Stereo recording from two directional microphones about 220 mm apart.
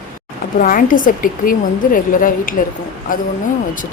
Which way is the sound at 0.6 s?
40° left (ahead or behind).